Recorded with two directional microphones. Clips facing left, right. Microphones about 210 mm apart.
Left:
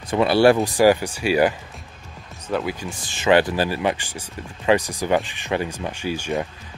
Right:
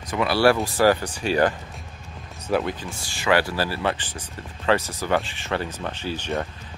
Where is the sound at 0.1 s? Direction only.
25° left (ahead or behind); by 1.5 s 10° left (ahead or behind).